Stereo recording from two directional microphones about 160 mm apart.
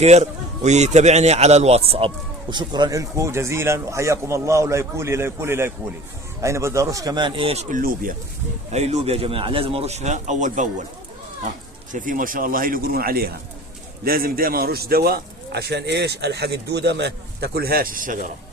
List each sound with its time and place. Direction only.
0.0 s a man's voice: 45° right (ahead or behind)
7.8 s a man's voice: 60° right (ahead or behind)
8.7 s speech: 45° right (ahead or behind)
11.9 s a man's voice: 55° right (ahead or behind)